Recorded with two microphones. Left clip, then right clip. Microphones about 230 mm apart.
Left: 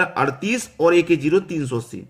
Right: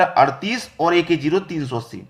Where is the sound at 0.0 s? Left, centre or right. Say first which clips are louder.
Right 5 dB; centre.